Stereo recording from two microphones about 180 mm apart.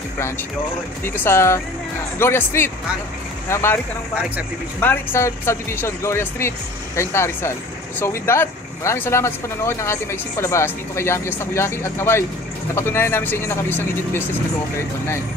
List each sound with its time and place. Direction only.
1.2 s speech: 15° left (ahead or behind)